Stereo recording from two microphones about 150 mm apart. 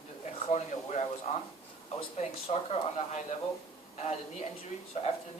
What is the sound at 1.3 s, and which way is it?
Speech, 50° left (ahead or behind).